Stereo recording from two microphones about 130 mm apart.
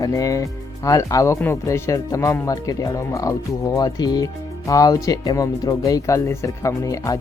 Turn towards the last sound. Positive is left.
turn(degrees=25)  # may be behind; listen again after turning